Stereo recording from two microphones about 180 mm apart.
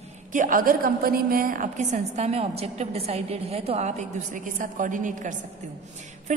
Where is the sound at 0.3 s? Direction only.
45° right (ahead or behind).